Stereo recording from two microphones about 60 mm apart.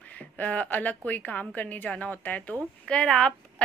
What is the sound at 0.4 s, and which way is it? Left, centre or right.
Speech, left.